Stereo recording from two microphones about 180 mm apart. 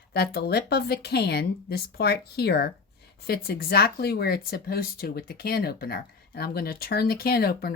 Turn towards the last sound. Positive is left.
turn(degrees=60)  # may be behind; listen again after turning